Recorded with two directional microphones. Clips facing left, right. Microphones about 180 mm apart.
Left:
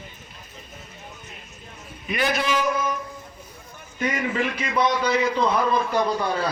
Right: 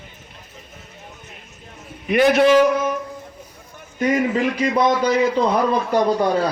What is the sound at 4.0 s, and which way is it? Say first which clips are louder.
A man's voice: right 6 dB; 40° right (ahead or behind).